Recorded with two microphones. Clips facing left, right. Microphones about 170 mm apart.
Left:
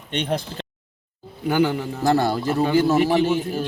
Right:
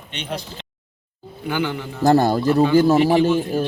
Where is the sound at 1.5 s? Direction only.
40° left (ahead or behind).